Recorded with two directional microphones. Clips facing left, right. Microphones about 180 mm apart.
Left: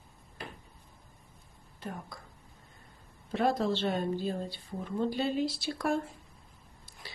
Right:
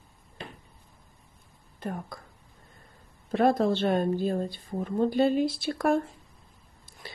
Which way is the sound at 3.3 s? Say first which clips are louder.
Right 5 dB; 50° right (ahead or behind).